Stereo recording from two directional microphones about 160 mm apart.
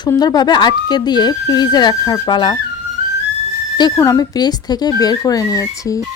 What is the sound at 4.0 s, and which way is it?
Speech, 20° left (ahead or behind).